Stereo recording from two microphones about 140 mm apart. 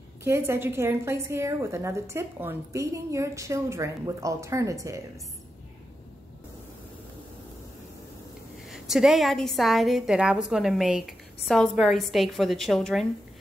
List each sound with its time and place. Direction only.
0.2 s a woman's voice: 20° right (ahead or behind)
8.6 s a woman's voice: 5° right (ahead or behind)